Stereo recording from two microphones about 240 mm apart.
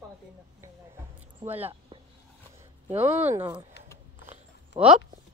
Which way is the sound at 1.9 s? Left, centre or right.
Right.